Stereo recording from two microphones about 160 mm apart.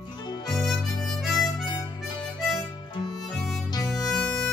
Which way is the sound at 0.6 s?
Centre (ahead or behind).